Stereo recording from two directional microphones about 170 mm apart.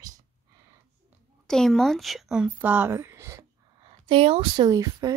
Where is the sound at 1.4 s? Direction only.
5° left (ahead or behind).